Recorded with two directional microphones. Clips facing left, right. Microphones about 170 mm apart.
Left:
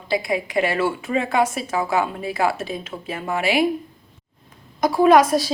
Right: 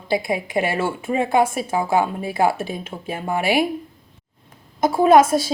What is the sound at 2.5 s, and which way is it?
Speech, 50° right (ahead or behind).